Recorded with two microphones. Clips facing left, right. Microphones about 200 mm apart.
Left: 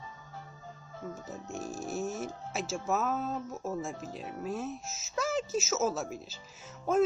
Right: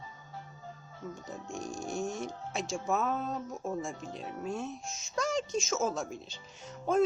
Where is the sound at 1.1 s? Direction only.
Centre (ahead or behind).